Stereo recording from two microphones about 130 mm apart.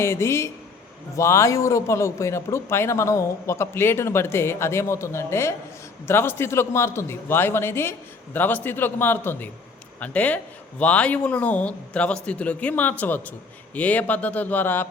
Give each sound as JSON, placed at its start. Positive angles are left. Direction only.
{"t": 0.0, "sound": "a man's voice", "side_deg": 20}